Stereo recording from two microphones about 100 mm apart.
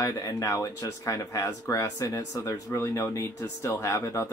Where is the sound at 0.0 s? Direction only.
35° left (ahead or behind).